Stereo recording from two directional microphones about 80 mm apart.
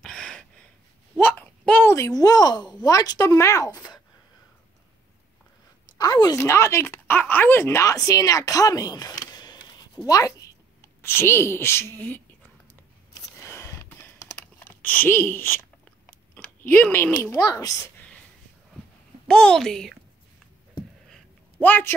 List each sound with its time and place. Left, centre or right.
0.0 s gasp: centre
1.1 s a sound: left
1.9 s speech: left
5.9 s a woman's voice: left
6.3 s a woman's voice: left
6.9 s speech: left
11.0 s a woman's voice: left
13.4 s a sound: left
13.8 s computer keyboard: left
14.6 s speech: left
16.1 s a sound: left
17.3 s speech: left
19.2 s a woman's voice: centre
21.5 s speech: left